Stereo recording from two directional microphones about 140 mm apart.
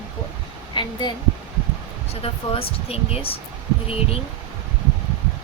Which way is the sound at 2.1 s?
45° left (ahead or behind).